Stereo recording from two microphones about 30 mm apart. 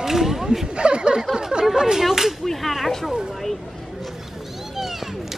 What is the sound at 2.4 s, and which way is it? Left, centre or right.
Speech, centre.